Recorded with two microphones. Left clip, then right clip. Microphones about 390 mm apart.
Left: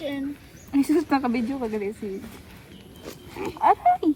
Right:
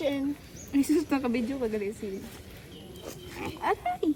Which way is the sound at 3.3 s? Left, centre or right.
Centre.